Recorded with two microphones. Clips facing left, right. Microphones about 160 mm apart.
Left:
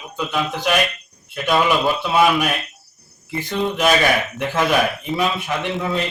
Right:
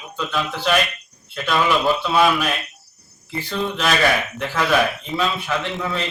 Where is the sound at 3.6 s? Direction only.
15° left (ahead or behind).